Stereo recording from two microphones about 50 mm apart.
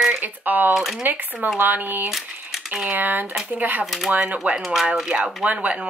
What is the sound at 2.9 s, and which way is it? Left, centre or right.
Speech, right.